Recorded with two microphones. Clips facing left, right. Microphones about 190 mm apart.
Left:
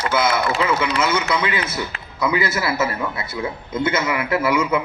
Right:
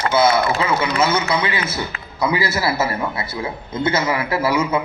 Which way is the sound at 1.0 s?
30° right (ahead or behind).